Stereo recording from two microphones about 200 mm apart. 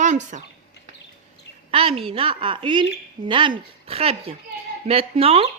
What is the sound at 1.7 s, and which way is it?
A woman's voice, 30° right (ahead or behind).